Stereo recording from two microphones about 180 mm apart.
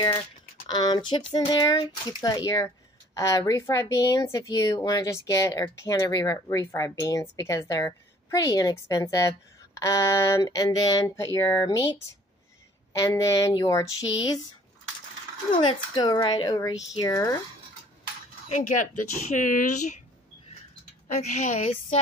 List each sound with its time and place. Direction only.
0.7 s speech: 20° left (ahead or behind)
15.5 s speech: 25° left (ahead or behind)
18.5 s speech: 45° left (ahead or behind)
21.1 s a woman's voice: 40° left (ahead or behind)